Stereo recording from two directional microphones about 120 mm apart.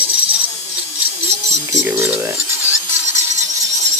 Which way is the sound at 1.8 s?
15° right (ahead or behind).